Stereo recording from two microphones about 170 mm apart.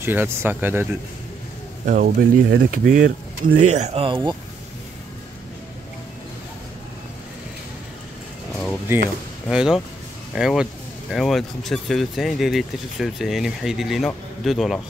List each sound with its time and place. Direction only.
0.0 s speech: 10° right (ahead or behind)
1.9 s speech: 55° right (ahead or behind); by 4.4 s 30° right (ahead or behind)
9.5 s speech: 5° right (ahead or behind)